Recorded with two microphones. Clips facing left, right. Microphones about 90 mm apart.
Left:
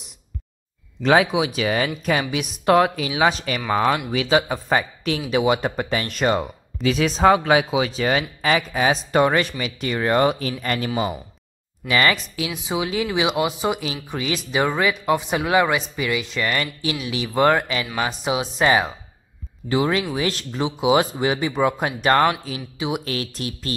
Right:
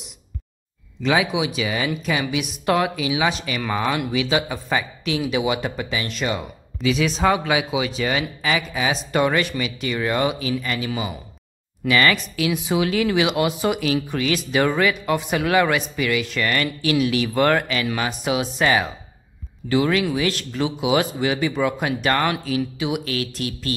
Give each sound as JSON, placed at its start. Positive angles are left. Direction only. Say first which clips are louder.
{"t": 1.0, "sound": "speech", "louder": "left 3 dB", "side_deg": 40}
{"t": 11.9, "sound": "speech", "louder": "right 1 dB", "side_deg": 25}